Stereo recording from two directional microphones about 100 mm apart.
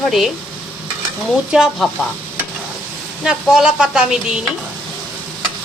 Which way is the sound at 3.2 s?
5° right (ahead or behind).